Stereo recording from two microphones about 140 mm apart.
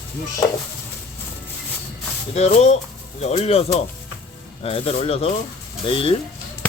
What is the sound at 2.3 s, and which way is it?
Speech, 50° left (ahead or behind).